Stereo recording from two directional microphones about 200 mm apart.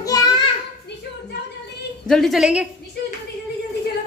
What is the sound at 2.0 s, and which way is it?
Speech, centre (ahead or behind).